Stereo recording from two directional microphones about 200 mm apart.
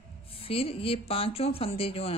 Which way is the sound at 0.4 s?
30° left (ahead or behind).